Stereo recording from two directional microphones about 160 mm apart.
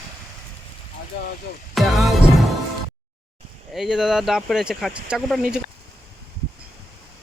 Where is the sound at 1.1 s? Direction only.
90° left.